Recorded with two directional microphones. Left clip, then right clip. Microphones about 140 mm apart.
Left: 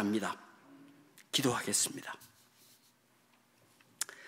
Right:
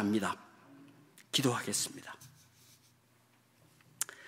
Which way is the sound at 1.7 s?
15° left (ahead or behind).